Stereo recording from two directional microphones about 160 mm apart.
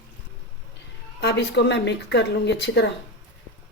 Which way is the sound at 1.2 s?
90° left.